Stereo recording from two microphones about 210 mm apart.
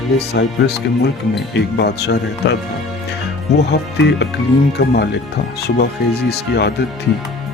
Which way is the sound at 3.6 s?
55° left (ahead or behind).